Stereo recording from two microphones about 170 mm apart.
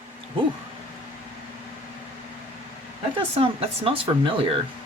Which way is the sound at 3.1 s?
35° right (ahead or behind).